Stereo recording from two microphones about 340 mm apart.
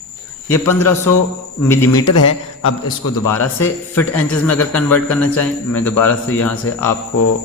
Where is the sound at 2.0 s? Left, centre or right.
Left.